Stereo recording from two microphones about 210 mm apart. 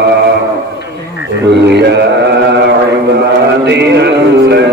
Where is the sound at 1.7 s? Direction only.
55° right (ahead or behind).